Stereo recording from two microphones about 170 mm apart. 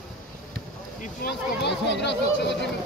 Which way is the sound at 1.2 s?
85° left.